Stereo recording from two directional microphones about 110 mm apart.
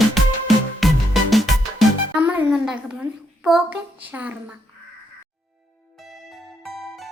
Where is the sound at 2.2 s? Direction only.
15° right (ahead or behind).